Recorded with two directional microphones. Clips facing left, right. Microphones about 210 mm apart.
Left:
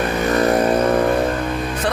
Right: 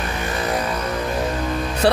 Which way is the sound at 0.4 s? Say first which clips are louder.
Left 8 dB; 55° left (ahead or behind).